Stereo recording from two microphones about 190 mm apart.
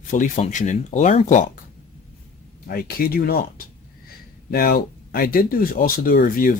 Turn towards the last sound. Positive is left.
turn(degrees=45)  # may be behind; listen again after turning